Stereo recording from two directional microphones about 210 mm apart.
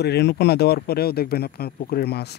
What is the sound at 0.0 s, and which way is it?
Speech, 50° left (ahead or behind).